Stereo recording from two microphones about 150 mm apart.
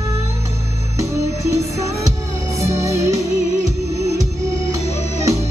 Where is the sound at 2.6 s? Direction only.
20° right (ahead or behind).